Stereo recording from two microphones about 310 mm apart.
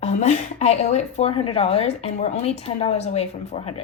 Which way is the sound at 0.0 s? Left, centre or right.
Left.